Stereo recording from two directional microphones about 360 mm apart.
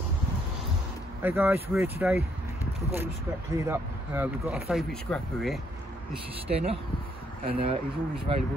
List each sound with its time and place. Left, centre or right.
1.2 s speech: centre
3.5 s speech: centre
6.4 s speech: centre